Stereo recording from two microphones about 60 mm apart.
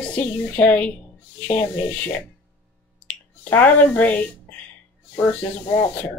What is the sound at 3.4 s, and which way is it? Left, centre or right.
Speech, left.